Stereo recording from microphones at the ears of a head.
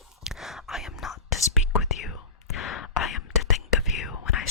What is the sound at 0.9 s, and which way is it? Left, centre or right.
Whispering, left.